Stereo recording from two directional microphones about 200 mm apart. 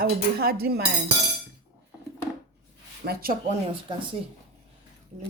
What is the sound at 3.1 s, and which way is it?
Speech, 50° right (ahead or behind).